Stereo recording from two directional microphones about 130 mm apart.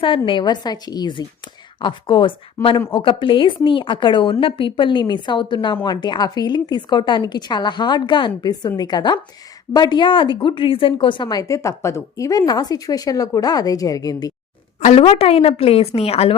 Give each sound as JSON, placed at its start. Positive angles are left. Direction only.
{"t": 0.3, "sound": "a woman's voice", "side_deg": 35}
{"t": 14.8, "sound": "speech", "side_deg": 60}
{"t": 15.0, "sound": "a woman's voice", "side_deg": 50}